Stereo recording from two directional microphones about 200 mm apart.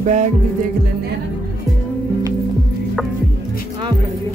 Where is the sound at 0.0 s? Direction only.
35° right (ahead or behind).